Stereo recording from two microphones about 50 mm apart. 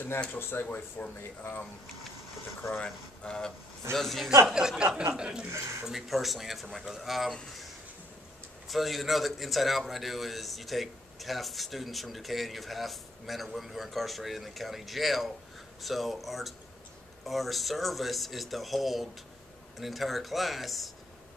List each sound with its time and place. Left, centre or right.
0.3 s speech: left
0.7 s speech: left
2.8 s speech: centre
3.9 s a man's voice: centre
4.5 s speech: centre
5.5 s speech: right
5.9 s a man's voice: centre
8.6 s a man's voice: centre